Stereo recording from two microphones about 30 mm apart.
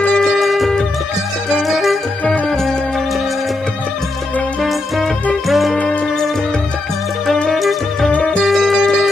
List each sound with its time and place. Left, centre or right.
0.4 s music: centre
4.6 s music: centre
7.5 s music: centre
8.2 s music: left
8.5 s music: centre